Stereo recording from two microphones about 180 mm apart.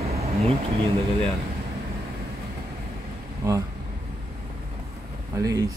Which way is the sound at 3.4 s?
15° right (ahead or behind).